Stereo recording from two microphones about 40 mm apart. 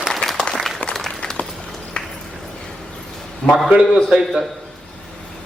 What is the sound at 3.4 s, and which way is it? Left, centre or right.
Speech, centre.